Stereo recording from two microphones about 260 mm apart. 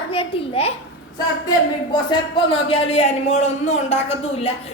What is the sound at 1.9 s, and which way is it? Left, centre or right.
Speech, centre.